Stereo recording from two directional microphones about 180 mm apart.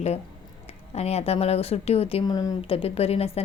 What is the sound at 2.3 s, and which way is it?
Speech, 20° left (ahead or behind).